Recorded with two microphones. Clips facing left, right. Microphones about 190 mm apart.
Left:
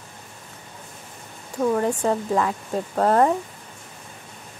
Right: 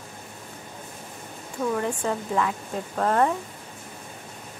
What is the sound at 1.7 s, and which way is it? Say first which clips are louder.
Speech: left 5 dB; 35° left (ahead or behind).